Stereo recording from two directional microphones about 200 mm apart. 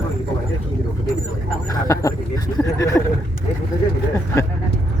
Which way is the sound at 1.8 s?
15° left (ahead or behind).